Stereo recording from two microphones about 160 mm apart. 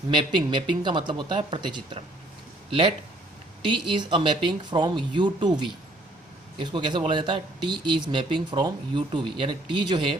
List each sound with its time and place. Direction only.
0.1 s speech: 30° right (ahead or behind)